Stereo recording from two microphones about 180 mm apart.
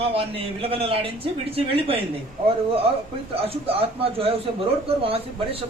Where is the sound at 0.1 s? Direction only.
30° right (ahead or behind).